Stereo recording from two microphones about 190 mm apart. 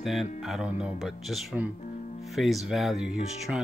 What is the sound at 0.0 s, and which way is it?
Speech, centre (ahead or behind).